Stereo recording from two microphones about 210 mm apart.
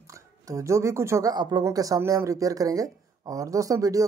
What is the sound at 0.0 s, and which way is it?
Speech, 15° right (ahead or behind).